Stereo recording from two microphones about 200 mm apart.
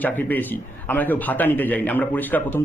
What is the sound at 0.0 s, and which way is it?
A man's voice, 10° left (ahead or behind).